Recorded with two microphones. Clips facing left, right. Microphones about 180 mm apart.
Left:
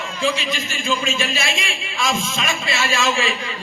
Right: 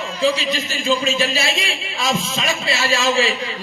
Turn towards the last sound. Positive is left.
turn(degrees=-35)  # may be behind; listen again after turning